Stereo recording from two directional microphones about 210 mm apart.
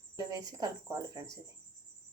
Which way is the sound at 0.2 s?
20° right (ahead or behind).